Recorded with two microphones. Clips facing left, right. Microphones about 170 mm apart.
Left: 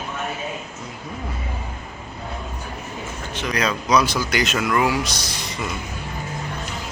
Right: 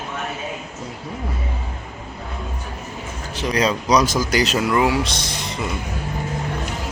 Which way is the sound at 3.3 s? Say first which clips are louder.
Right 4 dB; 35° right (ahead or behind).